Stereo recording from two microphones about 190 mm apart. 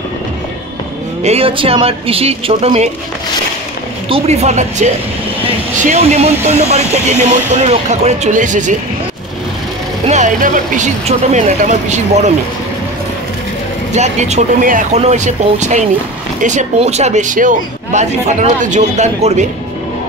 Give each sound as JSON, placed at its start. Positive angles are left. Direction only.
{"t": 1.2, "sound": "speech", "side_deg": -30}
{"t": 4.1, "sound": "speech", "side_deg": -35}
{"t": 10.0, "sound": "speech", "side_deg": -40}
{"t": 13.9, "sound": "speech", "side_deg": -35}